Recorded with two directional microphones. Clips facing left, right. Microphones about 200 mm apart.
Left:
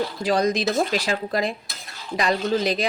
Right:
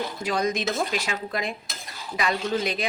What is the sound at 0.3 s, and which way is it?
A woman's voice, 35° left (ahead or behind).